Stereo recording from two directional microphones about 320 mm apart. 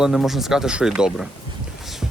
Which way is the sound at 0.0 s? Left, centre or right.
Centre.